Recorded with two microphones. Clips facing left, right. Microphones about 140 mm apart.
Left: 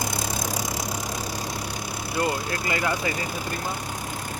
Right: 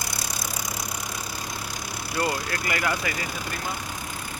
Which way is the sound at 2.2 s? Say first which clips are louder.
Left 1 dB; 25° left (ahead or behind).